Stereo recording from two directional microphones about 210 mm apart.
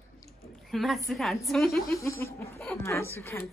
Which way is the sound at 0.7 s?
Centre (ahead or behind).